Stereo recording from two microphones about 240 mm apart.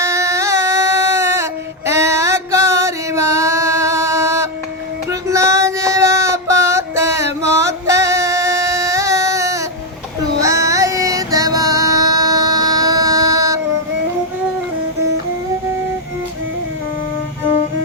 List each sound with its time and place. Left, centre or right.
0.0 s a sound: centre
1.9 s music: centre
5.3 s female singing: centre
10.4 s music: centre